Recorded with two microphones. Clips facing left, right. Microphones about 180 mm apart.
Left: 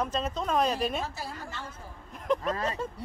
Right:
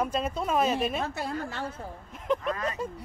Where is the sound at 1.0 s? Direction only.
65° right (ahead or behind).